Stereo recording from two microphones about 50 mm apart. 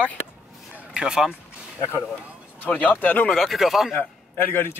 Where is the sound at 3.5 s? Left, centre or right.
Centre.